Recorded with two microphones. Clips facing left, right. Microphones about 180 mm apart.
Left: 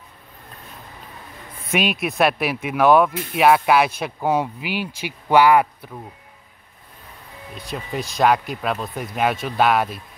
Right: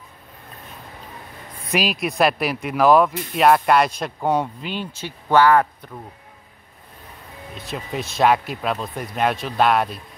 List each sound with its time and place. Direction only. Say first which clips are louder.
1.7 s speech: even; centre (ahead or behind)
7.5 s speech: even; centre (ahead or behind)